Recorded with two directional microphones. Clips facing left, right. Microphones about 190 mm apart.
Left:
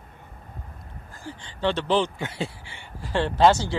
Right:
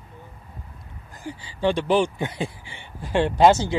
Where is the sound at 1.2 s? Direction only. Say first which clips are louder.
Right 3 dB; 10° right (ahead or behind).